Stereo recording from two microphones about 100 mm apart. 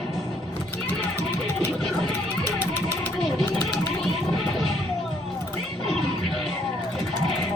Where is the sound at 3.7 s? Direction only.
5° left (ahead or behind).